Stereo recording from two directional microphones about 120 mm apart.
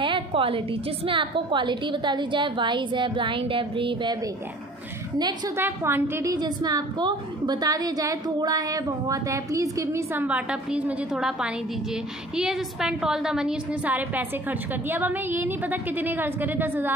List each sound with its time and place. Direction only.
0.0 s a sound: 45° right (ahead or behind)
1.0 s a woman's voice: 45° right (ahead or behind)
5.6 s a woman's voice: 20° right (ahead or behind)
10.2 s a woman's voice: 10° right (ahead or behind)